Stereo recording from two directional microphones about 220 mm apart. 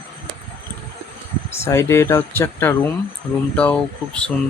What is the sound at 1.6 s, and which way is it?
Speech, 10° left (ahead or behind).